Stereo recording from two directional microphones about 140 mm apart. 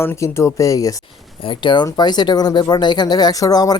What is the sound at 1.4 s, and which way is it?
Speech, 35° left (ahead or behind).